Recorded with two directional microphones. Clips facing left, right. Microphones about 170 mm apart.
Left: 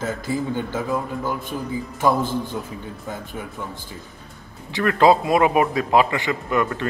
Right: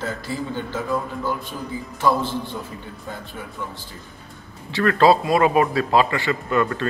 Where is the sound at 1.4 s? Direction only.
50° left (ahead or behind).